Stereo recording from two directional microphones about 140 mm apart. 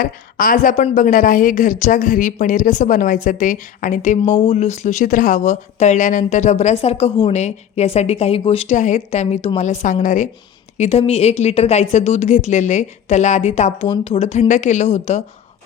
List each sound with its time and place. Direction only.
0.0 s a woman's voice: 85° left; by 4.2 s 65° left (ahead or behind)
4.2 s speech: 45° left (ahead or behind); by 10.2 s 65° left (ahead or behind)
10.8 s speech: 50° left (ahead or behind)
13.8 s speech: 35° left (ahead or behind); by 15.2 s 55° left (ahead or behind)